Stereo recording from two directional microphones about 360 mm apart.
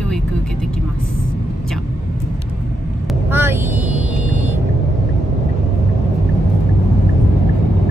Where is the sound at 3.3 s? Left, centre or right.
Centre.